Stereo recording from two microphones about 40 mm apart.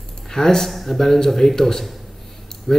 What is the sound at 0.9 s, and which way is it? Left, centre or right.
A man's voice, centre.